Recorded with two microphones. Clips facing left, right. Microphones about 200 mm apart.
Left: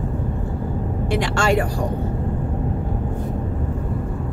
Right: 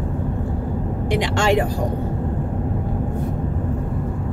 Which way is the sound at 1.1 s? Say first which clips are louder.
Right 1 dB; 20° right (ahead or behind).